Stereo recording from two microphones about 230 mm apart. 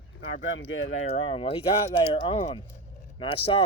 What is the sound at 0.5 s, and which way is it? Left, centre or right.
Speech, left.